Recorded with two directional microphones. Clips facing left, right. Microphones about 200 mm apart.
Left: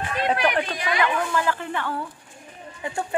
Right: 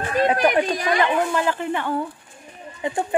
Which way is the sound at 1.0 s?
25° right (ahead or behind).